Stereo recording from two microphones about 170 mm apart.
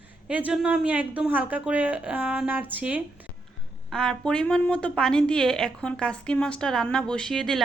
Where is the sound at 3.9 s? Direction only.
5° left (ahead or behind).